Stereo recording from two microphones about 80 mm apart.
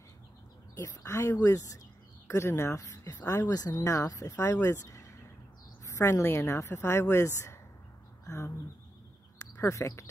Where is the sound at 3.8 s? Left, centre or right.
Left.